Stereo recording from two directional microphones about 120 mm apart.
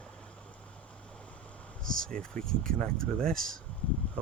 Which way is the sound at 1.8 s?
5° left (ahead or behind).